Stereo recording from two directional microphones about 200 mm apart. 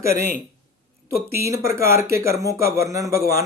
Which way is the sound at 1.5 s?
15° right (ahead or behind).